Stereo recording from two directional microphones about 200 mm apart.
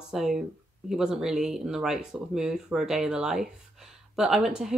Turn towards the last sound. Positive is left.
turn(degrees=0)  # may be behind; listen again after turning